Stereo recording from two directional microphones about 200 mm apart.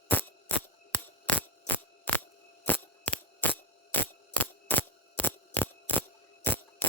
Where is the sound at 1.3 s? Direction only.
10° left (ahead or behind).